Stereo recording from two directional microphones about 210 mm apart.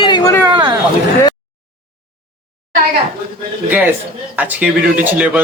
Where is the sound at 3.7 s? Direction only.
10° right (ahead or behind).